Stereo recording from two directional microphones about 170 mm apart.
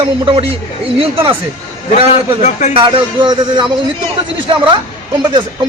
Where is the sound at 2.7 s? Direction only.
30° right (ahead or behind).